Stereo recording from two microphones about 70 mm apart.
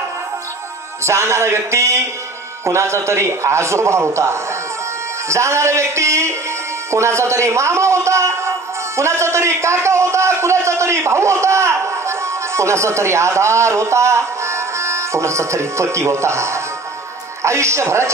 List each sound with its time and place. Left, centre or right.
1.0 s a man's voice: right